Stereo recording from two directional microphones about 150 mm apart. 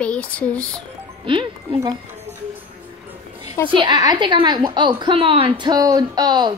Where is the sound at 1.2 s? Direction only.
35° right (ahead or behind).